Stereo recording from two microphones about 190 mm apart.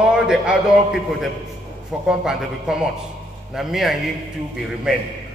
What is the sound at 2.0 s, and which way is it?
A man's voice, 5° right (ahead or behind).